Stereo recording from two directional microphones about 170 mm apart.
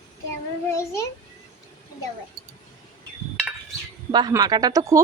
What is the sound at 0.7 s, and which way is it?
Speech, 15° left (ahead or behind).